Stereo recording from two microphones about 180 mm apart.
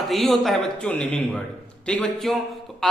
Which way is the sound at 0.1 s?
Centre (ahead or behind).